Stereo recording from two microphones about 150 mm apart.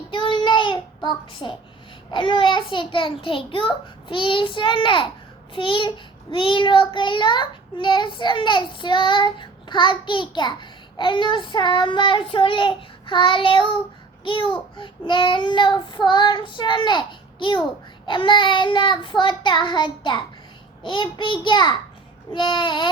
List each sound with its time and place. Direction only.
0.1 s child singing: 35° left (ahead or behind)